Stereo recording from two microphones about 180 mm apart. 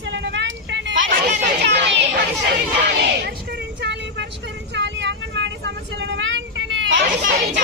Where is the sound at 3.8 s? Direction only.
70° right (ahead or behind).